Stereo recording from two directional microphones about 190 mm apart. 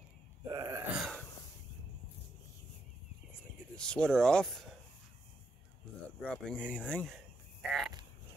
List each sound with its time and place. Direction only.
0.5 s groan: 20° right (ahead or behind)
3.7 s speech: 5° left (ahead or behind)
6.2 s speech: 5° left (ahead or behind)
7.6 s frog: centre (ahead or behind)